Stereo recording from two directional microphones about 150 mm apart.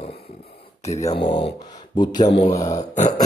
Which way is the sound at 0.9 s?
20° left (ahead or behind).